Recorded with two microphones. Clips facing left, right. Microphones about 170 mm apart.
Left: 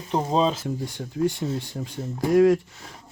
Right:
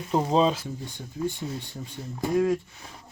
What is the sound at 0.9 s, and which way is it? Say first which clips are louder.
Speech: left 5 dB; 80° left.